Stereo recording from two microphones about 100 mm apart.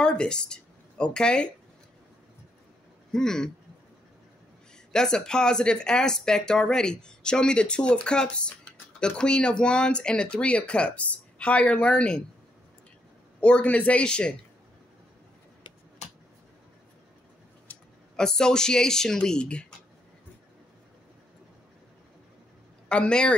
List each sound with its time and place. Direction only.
0.0 s speech: 10° left (ahead or behind)
3.1 s speech: 5° left (ahead or behind)
4.9 s speech: 5° left (ahead or behind)
13.4 s speech: 10° left (ahead or behind)
17.7 s a sound: 20° left (ahead or behind)
18.1 s speech: 5° left (ahead or behind)
22.8 s speech: 10° left (ahead or behind)